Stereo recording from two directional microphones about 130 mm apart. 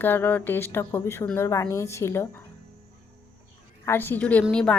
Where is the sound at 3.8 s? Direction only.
15° left (ahead or behind).